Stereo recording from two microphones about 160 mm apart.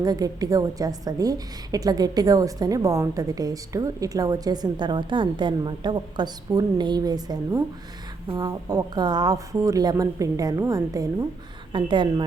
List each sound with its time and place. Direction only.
0.0 s a woman's voice: 25° right (ahead or behind)